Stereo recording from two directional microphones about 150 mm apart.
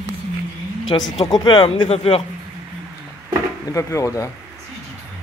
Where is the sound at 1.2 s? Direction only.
30° left (ahead or behind).